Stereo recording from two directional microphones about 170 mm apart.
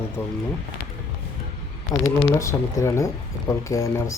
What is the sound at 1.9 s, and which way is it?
Speech, 20° left (ahead or behind).